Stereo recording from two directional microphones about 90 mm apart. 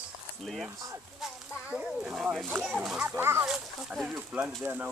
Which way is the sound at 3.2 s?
30° right (ahead or behind).